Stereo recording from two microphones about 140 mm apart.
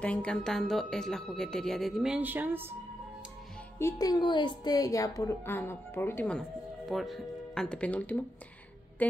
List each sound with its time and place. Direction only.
0.0 s speech: 10° left (ahead or behind); by 2.7 s 15° right (ahead or behind)
3.8 s a woman's voice: 30° left (ahead or behind); by 6.4 s 10° left (ahead or behind)
6.9 s speech: centre (ahead or behind)